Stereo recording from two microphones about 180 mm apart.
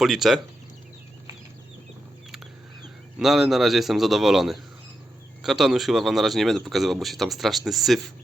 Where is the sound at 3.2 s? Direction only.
Centre (ahead or behind).